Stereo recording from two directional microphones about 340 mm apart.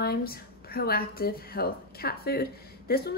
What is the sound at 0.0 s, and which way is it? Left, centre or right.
A woman's voice, left.